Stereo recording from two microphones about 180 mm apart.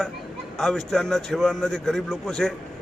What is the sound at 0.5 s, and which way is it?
A man's voice, centre (ahead or behind).